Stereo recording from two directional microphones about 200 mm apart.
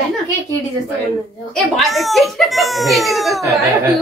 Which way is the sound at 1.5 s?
Centre (ahead or behind).